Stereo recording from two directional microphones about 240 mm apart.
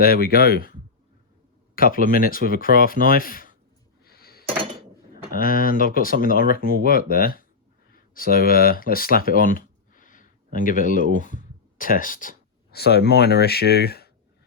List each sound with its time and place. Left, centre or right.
0.0 s speech: left
4.0 s a sound: left
5.3 s speech: left